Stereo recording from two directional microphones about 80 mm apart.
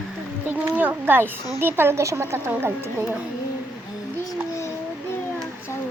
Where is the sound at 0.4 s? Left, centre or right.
Right.